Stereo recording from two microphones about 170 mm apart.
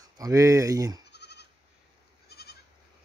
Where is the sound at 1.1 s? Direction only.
80° left.